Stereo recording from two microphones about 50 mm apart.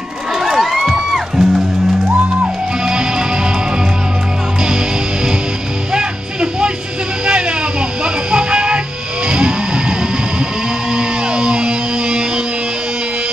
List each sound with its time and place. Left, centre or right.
0.4 s music: centre
2.0 s music: right
5.9 s music: centre
7.2 s a sound: centre
8.0 s music: centre
9.3 s a sound: centre
10.9 s music: centre